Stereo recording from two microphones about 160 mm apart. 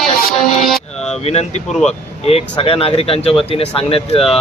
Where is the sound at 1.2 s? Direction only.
40° left (ahead or behind).